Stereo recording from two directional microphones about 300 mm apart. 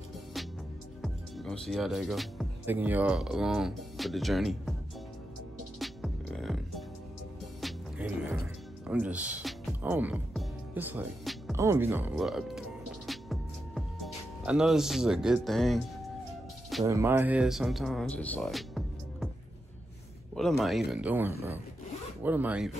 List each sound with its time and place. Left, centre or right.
1.0 s speech: centre
5.8 s music: centre
16.8 s speech: centre
20.3 s speech: centre